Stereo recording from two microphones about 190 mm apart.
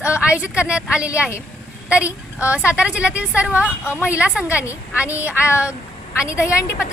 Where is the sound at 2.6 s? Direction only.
5° right (ahead or behind).